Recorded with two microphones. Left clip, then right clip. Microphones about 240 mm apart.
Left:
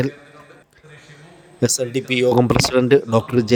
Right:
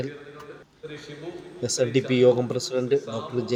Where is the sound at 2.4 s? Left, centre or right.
Left.